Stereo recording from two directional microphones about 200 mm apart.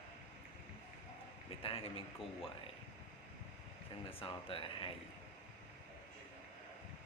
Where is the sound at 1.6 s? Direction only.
30° left (ahead or behind).